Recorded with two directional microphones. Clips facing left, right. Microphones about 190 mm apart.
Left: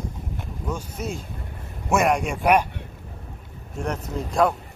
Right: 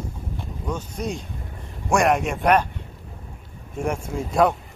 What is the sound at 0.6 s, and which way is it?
A man's voice, 5° left (ahead or behind).